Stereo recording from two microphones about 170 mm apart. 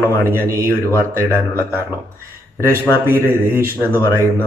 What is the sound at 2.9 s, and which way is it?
Speech, 15° right (ahead or behind).